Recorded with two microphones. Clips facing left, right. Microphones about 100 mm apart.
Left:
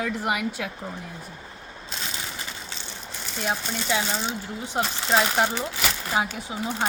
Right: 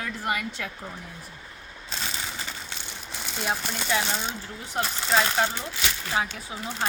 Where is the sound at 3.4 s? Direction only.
Centre (ahead or behind).